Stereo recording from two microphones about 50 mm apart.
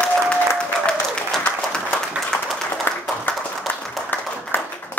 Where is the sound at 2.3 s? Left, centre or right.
Centre.